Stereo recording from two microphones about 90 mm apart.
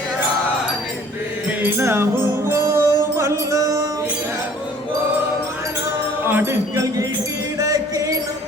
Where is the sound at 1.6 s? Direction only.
30° right (ahead or behind).